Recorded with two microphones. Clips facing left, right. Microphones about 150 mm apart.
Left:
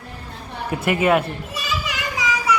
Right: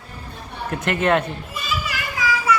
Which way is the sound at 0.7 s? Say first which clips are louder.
Left 2 dB; 10° left (ahead or behind).